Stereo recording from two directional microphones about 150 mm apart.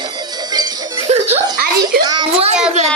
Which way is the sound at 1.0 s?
45° right (ahead or behind).